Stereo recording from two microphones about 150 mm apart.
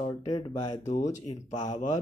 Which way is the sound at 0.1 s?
25° left (ahead or behind).